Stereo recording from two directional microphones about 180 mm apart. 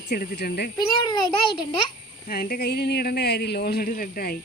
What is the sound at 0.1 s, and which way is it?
Speech, 65° left (ahead or behind).